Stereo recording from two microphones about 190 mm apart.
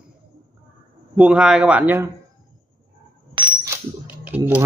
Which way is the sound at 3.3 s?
25° right (ahead or behind).